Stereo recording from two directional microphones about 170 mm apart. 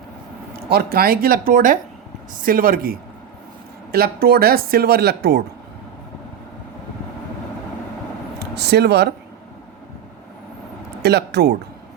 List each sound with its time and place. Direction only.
0.5 s speech: 60° right (ahead or behind)
8.5 s speech: 75° right (ahead or behind)
11.0 s speech: 75° right (ahead or behind)